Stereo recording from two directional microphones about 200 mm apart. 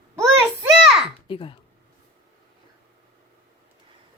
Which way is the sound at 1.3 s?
25° left (ahead or behind).